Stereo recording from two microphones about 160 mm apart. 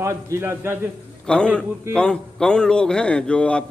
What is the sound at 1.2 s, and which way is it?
A man's voice, 5° left (ahead or behind).